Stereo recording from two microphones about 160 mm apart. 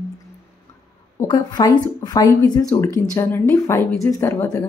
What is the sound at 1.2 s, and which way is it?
Speech, 25° left (ahead or behind).